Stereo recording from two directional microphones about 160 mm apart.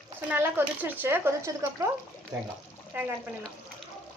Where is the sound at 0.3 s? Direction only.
10° right (ahead or behind).